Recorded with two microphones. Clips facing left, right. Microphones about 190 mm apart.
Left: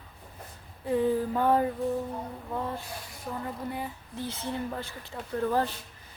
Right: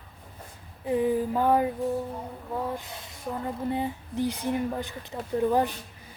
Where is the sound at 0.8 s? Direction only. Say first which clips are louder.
Right 1 dB; 15° right (ahead or behind).